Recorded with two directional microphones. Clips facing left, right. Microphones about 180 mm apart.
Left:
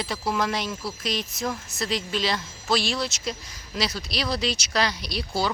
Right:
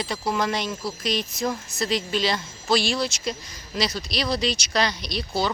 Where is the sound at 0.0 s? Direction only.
Centre (ahead or behind).